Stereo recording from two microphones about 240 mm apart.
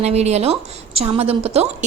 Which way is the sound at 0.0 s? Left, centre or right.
Right.